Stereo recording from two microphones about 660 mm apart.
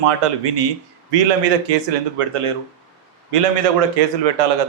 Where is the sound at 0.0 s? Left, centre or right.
Right.